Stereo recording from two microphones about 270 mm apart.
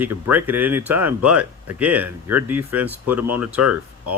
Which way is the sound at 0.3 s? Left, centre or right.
Centre.